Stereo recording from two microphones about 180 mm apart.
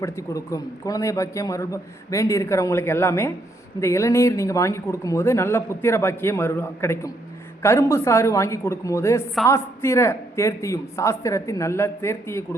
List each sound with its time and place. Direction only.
0.0 s a man's voice: 15° left (ahead or behind)